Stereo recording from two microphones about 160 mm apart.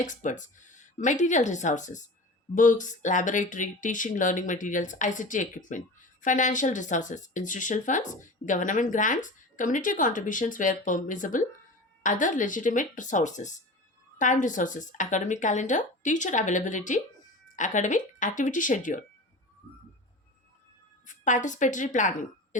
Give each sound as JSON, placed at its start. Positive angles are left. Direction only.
{"t": 0.0, "sound": "speech", "side_deg": 50}
{"t": 21.1, "sound": "speech", "side_deg": 50}